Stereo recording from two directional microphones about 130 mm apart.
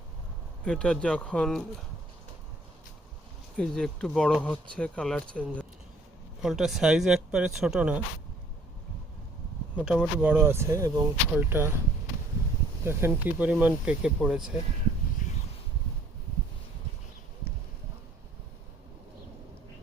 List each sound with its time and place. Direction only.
0.6 s speech: 10° left (ahead or behind)
3.6 s speech: 5° left (ahead or behind)
6.4 s speech: centre (ahead or behind)
9.7 s speech: 10° right (ahead or behind)
12.8 s speech: 20° right (ahead or behind)
15.2 s a sound: 80° left